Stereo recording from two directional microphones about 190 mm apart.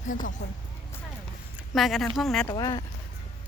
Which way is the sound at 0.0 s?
45° left (ahead or behind).